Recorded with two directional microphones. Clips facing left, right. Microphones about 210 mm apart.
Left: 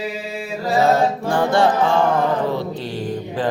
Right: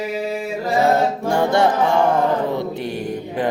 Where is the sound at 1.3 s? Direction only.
25° right (ahead or behind).